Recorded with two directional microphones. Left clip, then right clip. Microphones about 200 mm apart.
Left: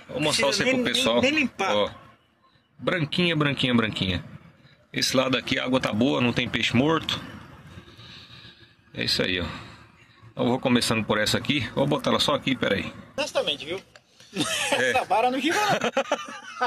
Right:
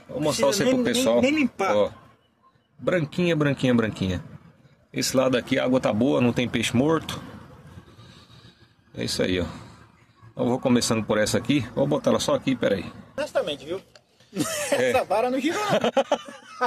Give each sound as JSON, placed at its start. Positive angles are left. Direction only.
{"t": 0.2, "sound": "speech", "side_deg": -20}
{"t": 0.8, "sound": "speech", "side_deg": -10}
{"t": 1.2, "sound": "speech", "side_deg": -60}
{"t": 2.8, "sound": "speech", "side_deg": -5}
{"t": 8.1, "sound": "a sound", "side_deg": -5}
{"t": 10.3, "sound": "speech", "side_deg": -5}
{"t": 13.1, "sound": "speech", "side_deg": -50}
{"t": 15.5, "sound": "speech", "side_deg": -15}